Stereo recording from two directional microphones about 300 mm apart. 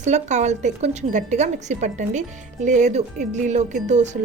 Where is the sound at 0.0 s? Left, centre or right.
Right.